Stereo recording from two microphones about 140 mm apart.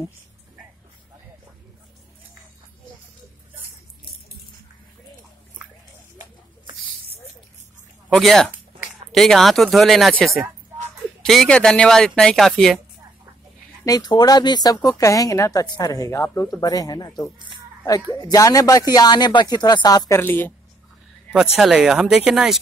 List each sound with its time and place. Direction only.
6.6 s a sound: 35° right (ahead or behind)
8.1 s speech: centre (ahead or behind)
13.8 s speech: 30° left (ahead or behind)
21.5 s speech: 5° right (ahead or behind)